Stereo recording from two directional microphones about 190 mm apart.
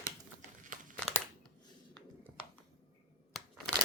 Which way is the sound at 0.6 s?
45° right (ahead or behind).